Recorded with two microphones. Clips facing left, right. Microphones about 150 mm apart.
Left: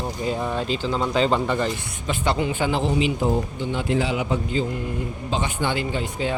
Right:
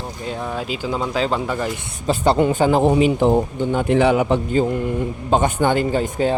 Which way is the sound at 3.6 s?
50° right (ahead or behind).